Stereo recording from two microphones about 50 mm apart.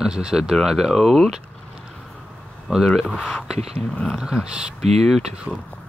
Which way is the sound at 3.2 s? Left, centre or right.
Centre.